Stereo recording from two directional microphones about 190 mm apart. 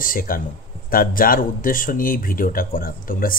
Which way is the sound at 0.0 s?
45° left (ahead or behind).